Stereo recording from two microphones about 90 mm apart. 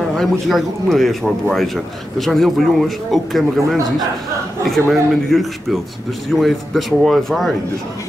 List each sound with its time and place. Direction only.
0.1 s a man's voice: centre (ahead or behind)
4.6 s a man's voice: centre (ahead or behind)